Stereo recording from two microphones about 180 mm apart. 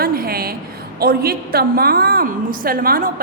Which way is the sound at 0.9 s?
60° right (ahead or behind).